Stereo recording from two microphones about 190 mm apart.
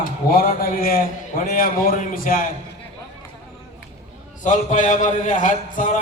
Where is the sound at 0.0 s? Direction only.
50° left (ahead or behind).